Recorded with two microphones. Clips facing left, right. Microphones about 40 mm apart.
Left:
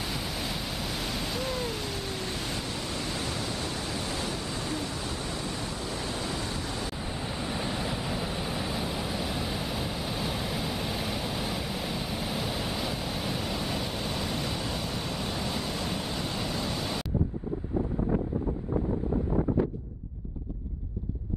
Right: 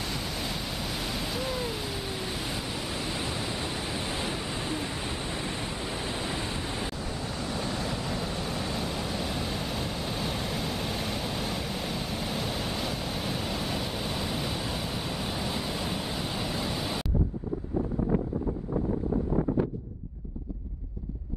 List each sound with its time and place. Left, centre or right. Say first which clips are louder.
0.0 s waves: even; centre; by 6.9 s right
7.0 s waves: even; centre